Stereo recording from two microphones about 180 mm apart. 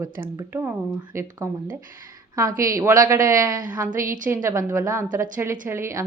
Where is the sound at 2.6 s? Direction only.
15° right (ahead or behind).